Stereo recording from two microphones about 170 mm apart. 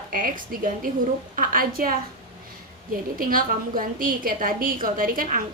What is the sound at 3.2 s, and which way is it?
A woman's voice, 55° right (ahead or behind).